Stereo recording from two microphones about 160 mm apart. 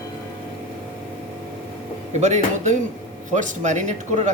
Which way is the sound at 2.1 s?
45° right (ahead or behind).